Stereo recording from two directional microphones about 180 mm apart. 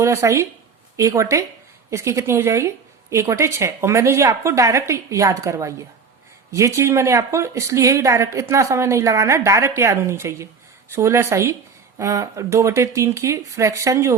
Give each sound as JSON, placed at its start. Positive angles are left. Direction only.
{"t": 0.0, "sound": "speech", "side_deg": -15}